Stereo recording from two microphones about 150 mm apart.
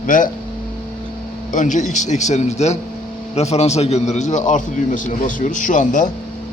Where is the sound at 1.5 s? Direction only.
55° left (ahead or behind).